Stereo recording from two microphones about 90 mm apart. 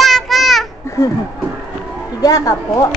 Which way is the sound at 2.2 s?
40° left (ahead or behind).